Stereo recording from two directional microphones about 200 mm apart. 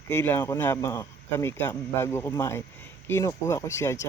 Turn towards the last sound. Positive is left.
turn(degrees=15)  # may be behind; listen again after turning